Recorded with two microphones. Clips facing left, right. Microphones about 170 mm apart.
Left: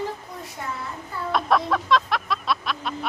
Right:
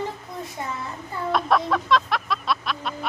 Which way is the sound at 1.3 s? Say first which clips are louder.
Even; centre (ahead or behind).